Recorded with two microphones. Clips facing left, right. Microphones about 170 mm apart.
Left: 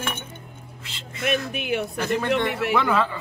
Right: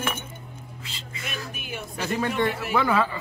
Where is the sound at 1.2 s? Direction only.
65° left (ahead or behind).